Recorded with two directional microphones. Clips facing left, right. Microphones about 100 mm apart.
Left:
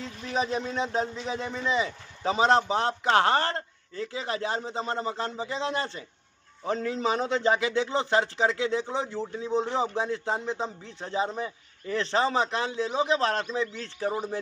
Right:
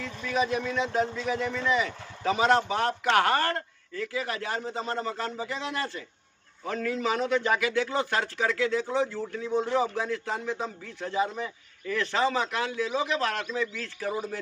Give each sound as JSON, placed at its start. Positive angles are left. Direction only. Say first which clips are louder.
{"t": 0.2, "sound": "a man's voice", "louder": "right 1 dB", "side_deg": 30}